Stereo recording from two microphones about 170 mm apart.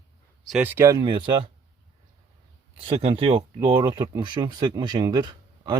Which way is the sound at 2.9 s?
35° right (ahead or behind).